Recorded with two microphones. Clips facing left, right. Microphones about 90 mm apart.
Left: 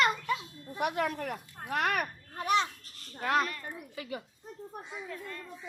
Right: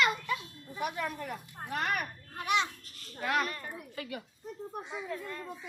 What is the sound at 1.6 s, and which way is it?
Speech, 80° left.